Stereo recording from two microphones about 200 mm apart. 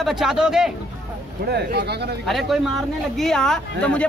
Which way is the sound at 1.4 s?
50° right (ahead or behind).